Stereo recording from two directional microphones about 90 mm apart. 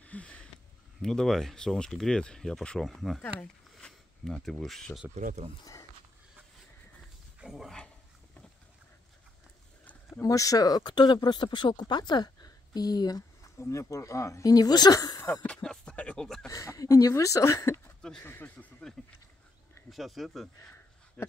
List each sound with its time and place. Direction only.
0.0 s a sound: 15° left (ahead or behind)
1.0 s speech: 5° left (ahead or behind)
7.3 s dog: 5° right (ahead or behind)
10.2 s speech: 40° left (ahead or behind)
13.6 s speech: 35° left (ahead or behind)
15.4 s music: 10° left (ahead or behind)
16.4 s speech: 40° left (ahead or behind)
18.2 s speech: 25° left (ahead or behind)
19.9 s speech: centre (ahead or behind)
21.2 s a sound: 20° left (ahead or behind)